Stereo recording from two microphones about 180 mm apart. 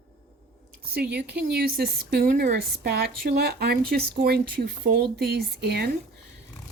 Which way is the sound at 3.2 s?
65° right (ahead or behind).